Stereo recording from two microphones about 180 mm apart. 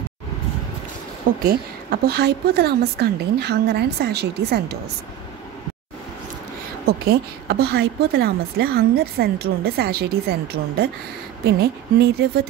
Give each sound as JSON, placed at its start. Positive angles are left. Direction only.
{"t": 1.4, "sound": "a woman's voice", "side_deg": -60}
{"t": 6.9, "sound": "a woman's voice", "side_deg": -60}